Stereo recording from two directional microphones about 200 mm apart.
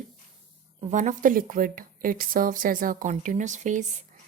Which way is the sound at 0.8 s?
35° right (ahead or behind).